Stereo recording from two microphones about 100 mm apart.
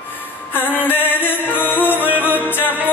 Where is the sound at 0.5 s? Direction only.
20° left (ahead or behind).